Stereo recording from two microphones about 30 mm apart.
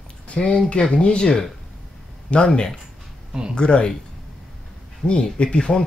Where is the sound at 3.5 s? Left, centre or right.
Left.